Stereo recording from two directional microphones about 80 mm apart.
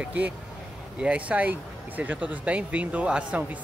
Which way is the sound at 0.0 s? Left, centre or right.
Centre.